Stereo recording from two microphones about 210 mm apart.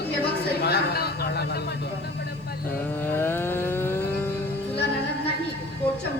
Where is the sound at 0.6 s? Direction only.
50° left (ahead or behind).